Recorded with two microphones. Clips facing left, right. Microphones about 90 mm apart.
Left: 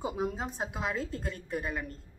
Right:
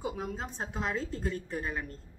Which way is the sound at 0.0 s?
15° left (ahead or behind).